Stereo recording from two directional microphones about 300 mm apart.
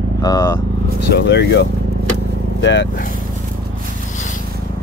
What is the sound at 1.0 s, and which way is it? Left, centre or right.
Speech, left.